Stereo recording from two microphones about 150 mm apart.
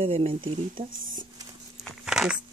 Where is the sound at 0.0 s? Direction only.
40° right (ahead or behind).